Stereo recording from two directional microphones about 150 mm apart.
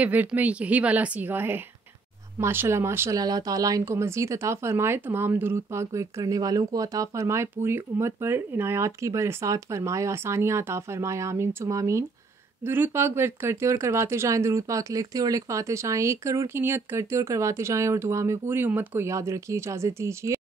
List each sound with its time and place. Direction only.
0.0 s a woman's voice: 10° right (ahead or behind)